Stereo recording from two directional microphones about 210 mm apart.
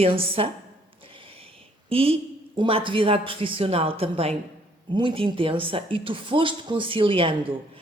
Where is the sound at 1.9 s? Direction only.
25° right (ahead or behind).